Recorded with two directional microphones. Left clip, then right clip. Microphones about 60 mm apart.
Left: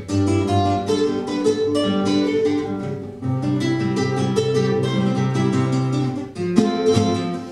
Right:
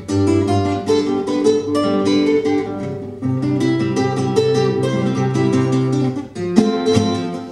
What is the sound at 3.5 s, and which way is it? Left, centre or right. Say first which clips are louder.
Music: right 4 dB; right.